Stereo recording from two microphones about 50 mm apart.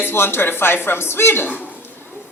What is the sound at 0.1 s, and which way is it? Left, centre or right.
A woman's voice, left.